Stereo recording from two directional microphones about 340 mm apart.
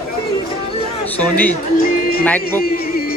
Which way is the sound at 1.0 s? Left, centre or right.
Centre.